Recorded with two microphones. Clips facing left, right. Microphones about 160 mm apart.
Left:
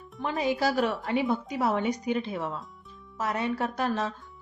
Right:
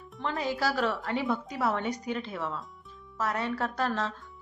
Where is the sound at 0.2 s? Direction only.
15° left (ahead or behind).